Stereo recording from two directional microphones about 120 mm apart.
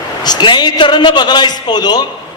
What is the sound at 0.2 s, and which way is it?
A man's voice, 35° left (ahead or behind).